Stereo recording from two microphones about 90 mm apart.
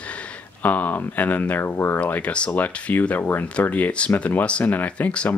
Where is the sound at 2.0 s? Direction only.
15° left (ahead or behind).